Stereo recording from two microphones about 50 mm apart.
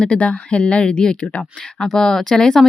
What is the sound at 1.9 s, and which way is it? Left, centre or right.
Speech, centre.